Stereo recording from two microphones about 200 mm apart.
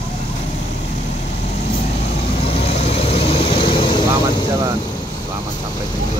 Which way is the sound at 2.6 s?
30° left (ahead or behind).